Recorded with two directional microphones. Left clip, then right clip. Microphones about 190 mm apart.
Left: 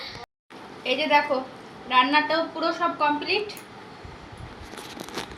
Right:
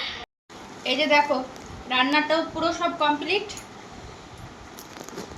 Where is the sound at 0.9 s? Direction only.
5° right (ahead or behind).